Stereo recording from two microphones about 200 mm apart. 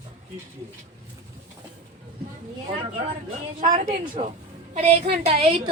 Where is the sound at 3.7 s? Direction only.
40° right (ahead or behind).